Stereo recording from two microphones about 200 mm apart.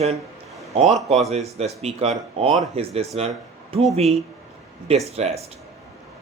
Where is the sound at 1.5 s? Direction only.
30° right (ahead or behind).